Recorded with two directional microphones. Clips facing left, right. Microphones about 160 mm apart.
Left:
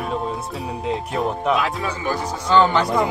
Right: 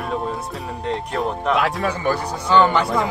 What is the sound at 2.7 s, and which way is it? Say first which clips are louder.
Speech: left 1 dB; 5° right (ahead or behind).